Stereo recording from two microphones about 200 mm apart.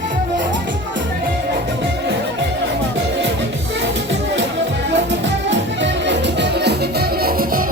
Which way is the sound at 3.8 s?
65° right (ahead or behind).